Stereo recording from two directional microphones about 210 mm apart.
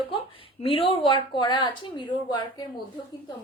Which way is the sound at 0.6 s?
25° left (ahead or behind).